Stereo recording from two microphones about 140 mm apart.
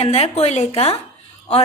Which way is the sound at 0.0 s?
45° left (ahead or behind).